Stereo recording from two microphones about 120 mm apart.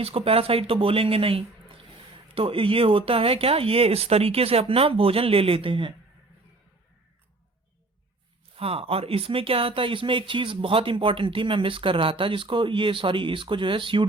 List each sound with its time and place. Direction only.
0.0 s speech: 55° right (ahead or behind)
8.5 s speech: 55° right (ahead or behind)